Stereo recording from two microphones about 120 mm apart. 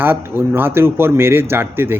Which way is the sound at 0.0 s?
20° right (ahead or behind).